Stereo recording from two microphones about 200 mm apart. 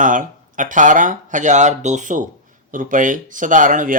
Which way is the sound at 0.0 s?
40° right (ahead or behind).